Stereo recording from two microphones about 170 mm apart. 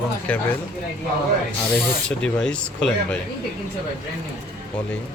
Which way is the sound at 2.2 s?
5° left (ahead or behind).